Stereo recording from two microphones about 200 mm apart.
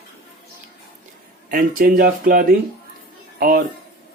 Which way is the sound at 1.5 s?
45° right (ahead or behind).